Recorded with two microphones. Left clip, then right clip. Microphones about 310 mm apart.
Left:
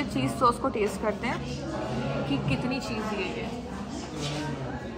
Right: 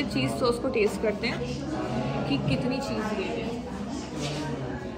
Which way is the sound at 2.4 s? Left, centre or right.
Centre.